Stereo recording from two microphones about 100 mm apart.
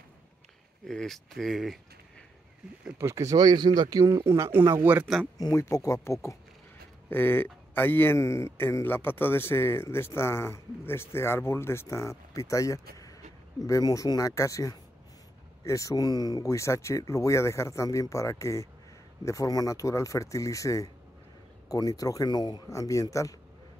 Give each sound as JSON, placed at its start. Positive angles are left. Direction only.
{"t": 0.8, "sound": "speech", "side_deg": 5}
{"t": 3.0, "sound": "speech", "side_deg": -30}
{"t": 4.0, "sound": "speech", "side_deg": -30}
{"t": 5.4, "sound": "speech", "side_deg": 30}
{"t": 7.1, "sound": "speech", "side_deg": 20}